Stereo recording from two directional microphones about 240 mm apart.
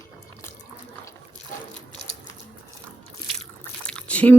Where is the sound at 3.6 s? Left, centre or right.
Centre.